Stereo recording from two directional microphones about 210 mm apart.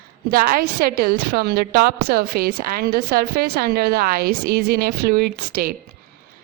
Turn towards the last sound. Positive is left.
turn(degrees=-45)  # may be behind; listen again after turning